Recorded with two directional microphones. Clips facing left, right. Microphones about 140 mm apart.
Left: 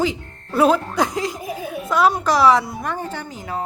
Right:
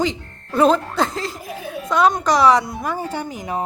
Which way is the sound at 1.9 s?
5° left (ahead or behind).